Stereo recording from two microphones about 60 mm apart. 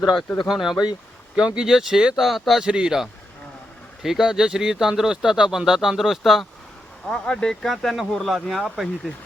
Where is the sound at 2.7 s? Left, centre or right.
Centre.